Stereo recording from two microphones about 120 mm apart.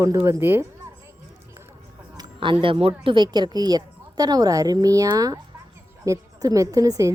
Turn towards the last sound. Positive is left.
turn(degrees=-30)  # may be behind; listen again after turning